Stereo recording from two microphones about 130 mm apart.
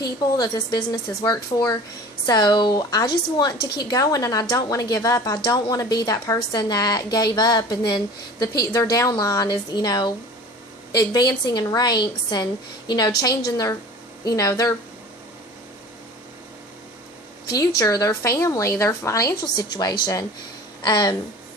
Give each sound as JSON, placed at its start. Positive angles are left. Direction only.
{"t": 0.0, "sound": "a woman's voice", "side_deg": 30}
{"t": 17.5, "sound": "a woman's voice", "side_deg": 30}